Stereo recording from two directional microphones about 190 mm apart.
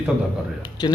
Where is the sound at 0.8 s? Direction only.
20° left (ahead or behind).